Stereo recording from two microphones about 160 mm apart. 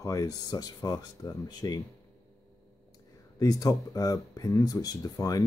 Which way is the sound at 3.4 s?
20° left (ahead or behind).